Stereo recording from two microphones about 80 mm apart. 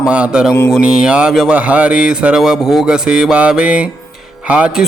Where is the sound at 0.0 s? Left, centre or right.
Centre.